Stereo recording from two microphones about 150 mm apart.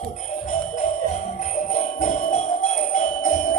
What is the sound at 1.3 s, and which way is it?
Jingle bell, 55° left (ahead or behind).